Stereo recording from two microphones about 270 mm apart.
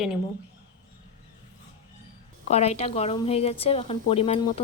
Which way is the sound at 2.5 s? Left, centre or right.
Left.